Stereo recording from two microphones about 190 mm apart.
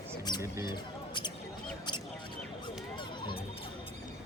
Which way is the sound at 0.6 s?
20° left (ahead or behind).